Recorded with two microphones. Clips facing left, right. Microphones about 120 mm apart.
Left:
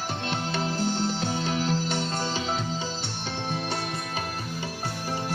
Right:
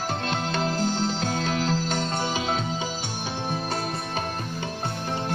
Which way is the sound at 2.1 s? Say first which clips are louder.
Right 2 dB; 15° right (ahead or behind).